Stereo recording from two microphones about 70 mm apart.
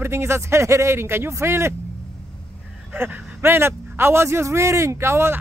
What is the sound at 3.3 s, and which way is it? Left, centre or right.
Speech, right.